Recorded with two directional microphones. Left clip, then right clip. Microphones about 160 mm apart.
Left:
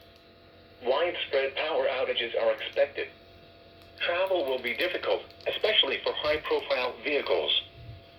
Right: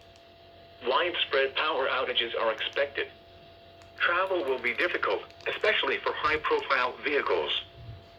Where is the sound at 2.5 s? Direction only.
50° right (ahead or behind).